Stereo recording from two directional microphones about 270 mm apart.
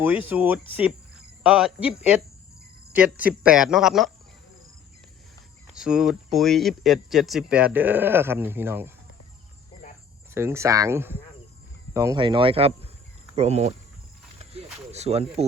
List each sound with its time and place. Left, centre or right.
0.0 s speech: centre
5.6 s speech: centre
10.3 s speech: centre
14.3 s a sound: right